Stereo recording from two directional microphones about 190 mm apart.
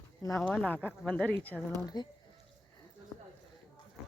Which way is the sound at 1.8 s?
20° left (ahead or behind).